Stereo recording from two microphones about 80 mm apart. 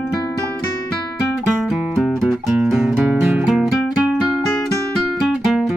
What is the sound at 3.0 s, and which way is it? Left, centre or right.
Music, centre.